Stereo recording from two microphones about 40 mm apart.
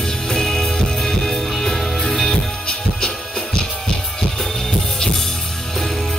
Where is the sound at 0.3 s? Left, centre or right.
Centre.